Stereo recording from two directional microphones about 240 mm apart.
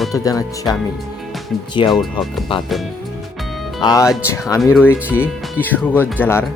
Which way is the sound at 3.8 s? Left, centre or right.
Centre.